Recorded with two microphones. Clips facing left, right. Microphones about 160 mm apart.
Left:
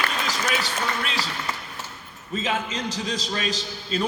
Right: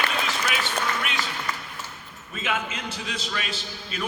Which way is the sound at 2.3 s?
30° left (ahead or behind).